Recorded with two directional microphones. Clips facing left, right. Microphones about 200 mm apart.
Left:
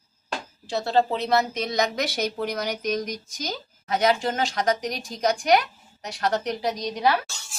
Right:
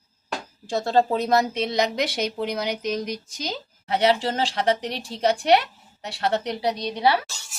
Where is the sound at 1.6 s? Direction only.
30° right (ahead or behind).